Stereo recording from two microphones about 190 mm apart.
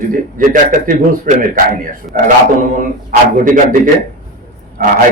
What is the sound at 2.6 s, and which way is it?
A man's voice, 45° right (ahead or behind).